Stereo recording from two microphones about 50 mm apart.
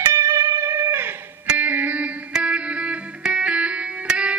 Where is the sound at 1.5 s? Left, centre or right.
Right.